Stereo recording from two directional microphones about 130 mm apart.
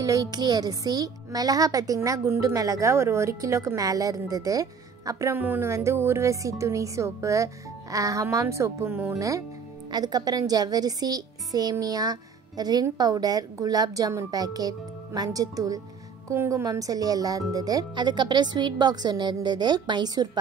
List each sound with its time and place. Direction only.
0.0 s speech: 30° right (ahead or behind)
9.8 s speech: 30° right (ahead or behind)